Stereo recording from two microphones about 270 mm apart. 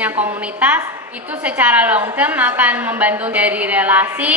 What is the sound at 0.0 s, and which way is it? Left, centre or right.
A woman's voice, centre.